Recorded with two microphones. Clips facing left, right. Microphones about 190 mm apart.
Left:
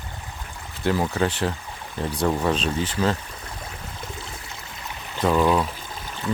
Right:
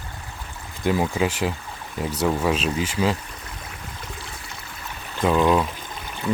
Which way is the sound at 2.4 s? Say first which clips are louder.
Right 1 dB; 5° right (ahead or behind).